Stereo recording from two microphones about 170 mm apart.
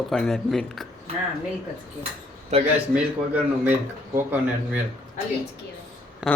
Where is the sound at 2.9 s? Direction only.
10° right (ahead or behind).